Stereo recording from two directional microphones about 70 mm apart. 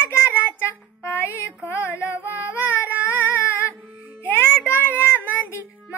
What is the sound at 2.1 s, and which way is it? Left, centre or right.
Child singing, right.